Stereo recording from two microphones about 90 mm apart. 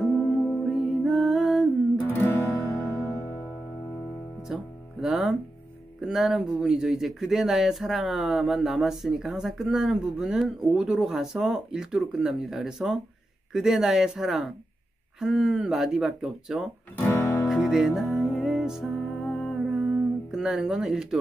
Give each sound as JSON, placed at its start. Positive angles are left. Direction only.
{"t": 0.0, "sound": "music", "side_deg": 0}
{"t": 2.0, "sound": "music", "side_deg": 25}
{"t": 2.7, "sound": "music", "side_deg": 15}
{"t": 4.5, "sound": "speech", "side_deg": -5}
{"t": 16.9, "sound": "music", "side_deg": 20}
{"t": 17.6, "sound": "music", "side_deg": -5}